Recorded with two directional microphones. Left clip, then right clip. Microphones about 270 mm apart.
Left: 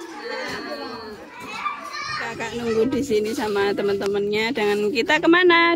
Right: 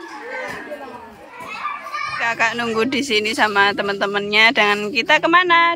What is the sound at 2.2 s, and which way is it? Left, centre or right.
Speech, centre.